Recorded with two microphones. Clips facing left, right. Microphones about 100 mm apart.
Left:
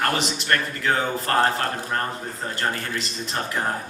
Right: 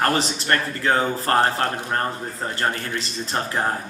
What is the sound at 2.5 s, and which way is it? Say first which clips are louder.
Speech: right 1 dB; 35° right (ahead or behind).